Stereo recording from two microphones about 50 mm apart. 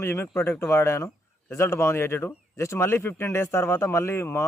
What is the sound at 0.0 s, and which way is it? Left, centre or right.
Speech, left.